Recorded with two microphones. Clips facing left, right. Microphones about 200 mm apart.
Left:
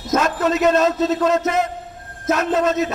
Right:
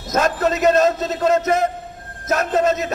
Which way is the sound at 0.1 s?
45° right (ahead or behind).